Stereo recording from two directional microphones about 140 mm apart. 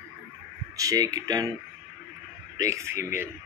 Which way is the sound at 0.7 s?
25° right (ahead or behind).